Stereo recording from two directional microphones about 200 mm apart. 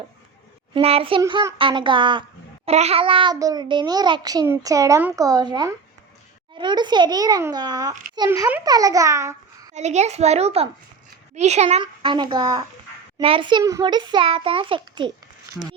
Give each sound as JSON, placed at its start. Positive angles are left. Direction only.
{"t": 0.7, "sound": "a child's voice", "side_deg": -30}
{"t": 1.2, "sound": "a child's voice", "side_deg": -15}
{"t": 9.7, "sound": "a child's voice", "side_deg": -35}